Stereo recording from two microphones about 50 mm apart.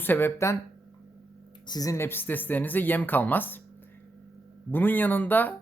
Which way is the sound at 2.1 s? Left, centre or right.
Left.